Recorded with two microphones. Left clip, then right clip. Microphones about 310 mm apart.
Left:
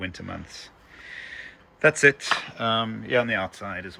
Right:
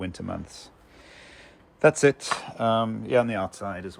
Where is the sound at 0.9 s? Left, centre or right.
Centre.